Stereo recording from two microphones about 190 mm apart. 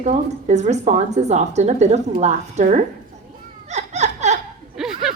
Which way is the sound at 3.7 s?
35° right (ahead or behind).